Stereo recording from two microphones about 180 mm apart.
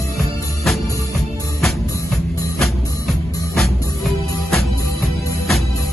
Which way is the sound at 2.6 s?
Centre (ahead or behind).